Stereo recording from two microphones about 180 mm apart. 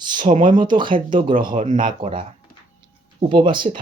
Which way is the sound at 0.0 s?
25° right (ahead or behind).